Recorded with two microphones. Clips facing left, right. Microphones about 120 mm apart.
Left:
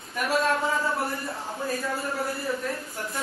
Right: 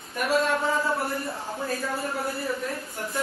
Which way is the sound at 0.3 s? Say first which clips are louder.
Right 1 dB; centre (ahead or behind).